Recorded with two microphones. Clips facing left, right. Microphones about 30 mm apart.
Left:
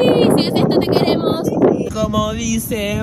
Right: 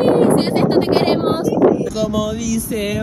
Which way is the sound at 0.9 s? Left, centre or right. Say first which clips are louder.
Even; centre.